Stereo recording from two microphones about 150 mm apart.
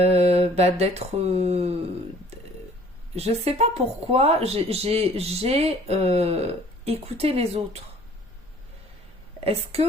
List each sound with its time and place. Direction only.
0.0 s speech: 45° right (ahead or behind)
3.2 s speech: 45° right (ahead or behind)
9.4 s a woman's voice: 40° right (ahead or behind)